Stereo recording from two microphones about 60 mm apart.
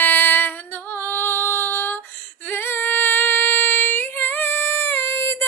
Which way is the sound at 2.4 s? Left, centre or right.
Left.